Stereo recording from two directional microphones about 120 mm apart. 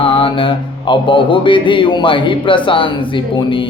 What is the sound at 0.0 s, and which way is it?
Mantra, 45° left (ahead or behind).